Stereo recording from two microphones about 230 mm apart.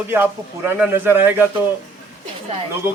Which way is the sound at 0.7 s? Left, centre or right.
Centre.